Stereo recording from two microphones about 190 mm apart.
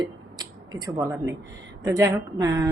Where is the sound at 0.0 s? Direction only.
20° right (ahead or behind).